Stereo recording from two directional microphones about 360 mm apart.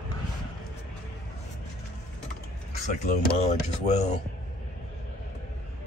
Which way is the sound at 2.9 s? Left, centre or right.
Centre.